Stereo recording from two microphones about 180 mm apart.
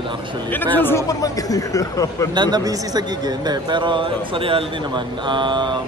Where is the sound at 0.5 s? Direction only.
10° left (ahead or behind).